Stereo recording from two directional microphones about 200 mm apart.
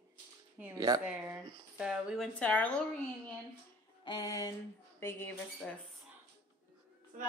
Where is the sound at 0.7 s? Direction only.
20° right (ahead or behind).